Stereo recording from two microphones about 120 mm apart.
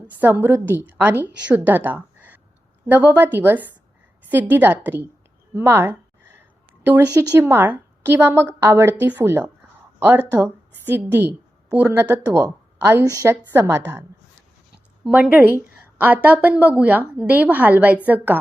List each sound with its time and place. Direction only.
0.2 s a woman's voice: 20° right (ahead or behind)
15.0 s a woman's voice: 10° right (ahead or behind)